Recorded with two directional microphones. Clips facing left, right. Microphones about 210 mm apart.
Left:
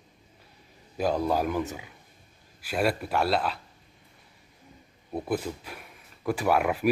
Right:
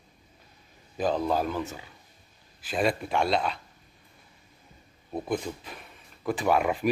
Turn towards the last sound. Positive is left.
turn(degrees=5)  # may be behind; listen again after turning